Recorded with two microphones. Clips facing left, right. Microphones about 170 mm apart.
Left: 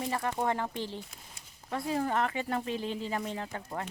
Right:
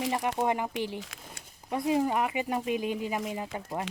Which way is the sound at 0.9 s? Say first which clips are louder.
Right 3 dB; 90° right.